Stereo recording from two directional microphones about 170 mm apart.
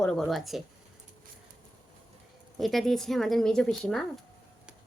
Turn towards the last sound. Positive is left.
turn(degrees=5)  # may be behind; listen again after turning